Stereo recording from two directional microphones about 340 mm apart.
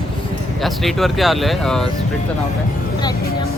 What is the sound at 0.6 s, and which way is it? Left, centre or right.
Speech, centre.